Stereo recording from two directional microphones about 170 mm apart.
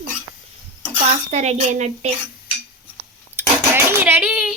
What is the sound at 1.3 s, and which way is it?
Speech, 40° right (ahead or behind).